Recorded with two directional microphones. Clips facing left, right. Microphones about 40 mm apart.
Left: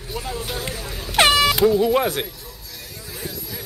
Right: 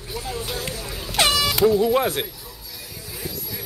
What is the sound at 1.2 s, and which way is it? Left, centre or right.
Air horn, left.